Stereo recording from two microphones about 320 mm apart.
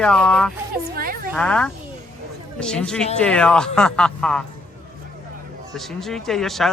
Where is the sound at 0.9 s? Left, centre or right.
Right.